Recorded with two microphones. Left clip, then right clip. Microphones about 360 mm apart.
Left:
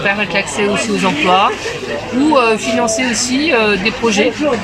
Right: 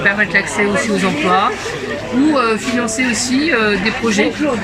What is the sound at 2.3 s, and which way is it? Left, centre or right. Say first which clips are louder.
Speech: left 3 dB; centre.